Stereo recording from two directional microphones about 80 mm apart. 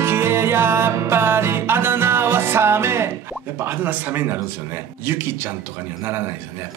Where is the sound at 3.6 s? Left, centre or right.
Right.